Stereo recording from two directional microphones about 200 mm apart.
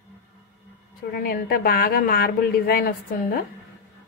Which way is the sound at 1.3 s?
50° left (ahead or behind).